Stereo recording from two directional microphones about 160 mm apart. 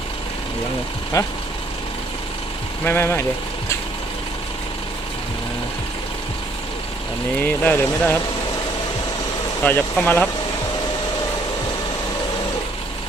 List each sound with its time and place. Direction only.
1.1 s speech: 20° left (ahead or behind)
2.8 s speech: 15° left (ahead or behind)
7.4 s speech: 10° left (ahead or behind)
9.6 s speech: 10° left (ahead or behind)